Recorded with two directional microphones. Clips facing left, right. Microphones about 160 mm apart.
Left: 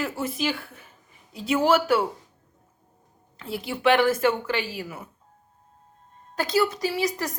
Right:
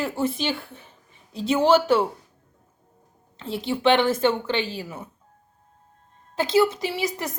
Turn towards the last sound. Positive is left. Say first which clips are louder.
# left 1 dB
turn(degrees=-25)  # may be behind; listen again after turning